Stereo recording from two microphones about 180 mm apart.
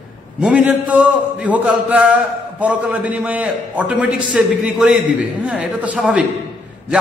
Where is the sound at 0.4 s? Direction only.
5° right (ahead or behind).